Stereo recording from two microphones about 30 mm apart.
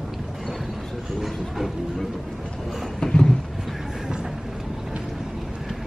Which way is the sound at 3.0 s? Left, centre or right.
Left.